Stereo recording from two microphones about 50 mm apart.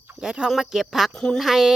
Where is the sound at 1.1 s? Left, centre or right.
Centre.